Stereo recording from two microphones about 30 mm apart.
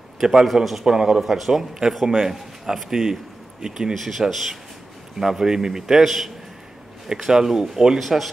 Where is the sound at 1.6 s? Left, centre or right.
Centre.